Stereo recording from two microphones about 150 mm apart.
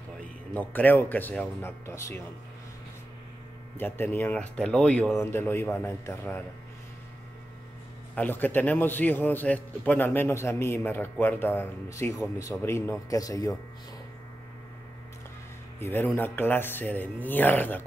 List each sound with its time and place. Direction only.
0.2 s a man's voice: 10° left (ahead or behind)
3.7 s a man's voice: 15° left (ahead or behind)
8.1 s a man's voice: 10° left (ahead or behind)
15.8 s a man's voice: 15° left (ahead or behind)